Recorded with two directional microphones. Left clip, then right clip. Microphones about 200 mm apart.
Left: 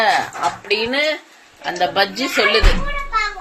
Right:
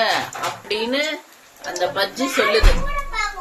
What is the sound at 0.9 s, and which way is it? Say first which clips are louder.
Speech: left 2 dB; 25° left (ahead or behind).